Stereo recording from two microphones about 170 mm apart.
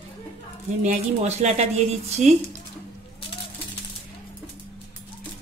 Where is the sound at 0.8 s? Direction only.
45° right (ahead or behind).